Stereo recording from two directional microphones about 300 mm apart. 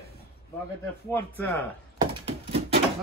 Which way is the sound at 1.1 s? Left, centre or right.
Centre.